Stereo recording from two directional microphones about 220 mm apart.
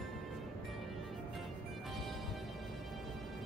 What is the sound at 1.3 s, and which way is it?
Music, centre (ahead or behind).